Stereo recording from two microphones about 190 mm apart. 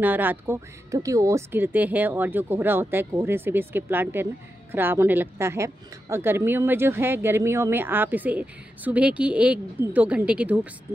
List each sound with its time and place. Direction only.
0.0 s a woman's voice: 10° right (ahead or behind)